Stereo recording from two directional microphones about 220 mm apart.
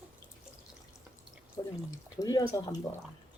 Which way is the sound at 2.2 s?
15° left (ahead or behind).